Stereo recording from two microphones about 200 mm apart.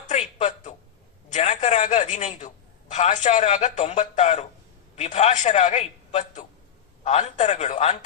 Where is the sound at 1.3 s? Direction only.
35° left (ahead or behind).